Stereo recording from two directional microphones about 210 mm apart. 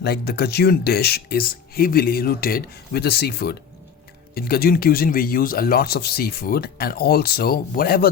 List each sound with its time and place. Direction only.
0.0 s speech: 50° left (ahead or behind)